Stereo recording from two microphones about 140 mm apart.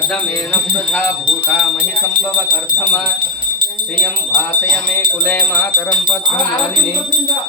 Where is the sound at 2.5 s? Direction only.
10° left (ahead or behind).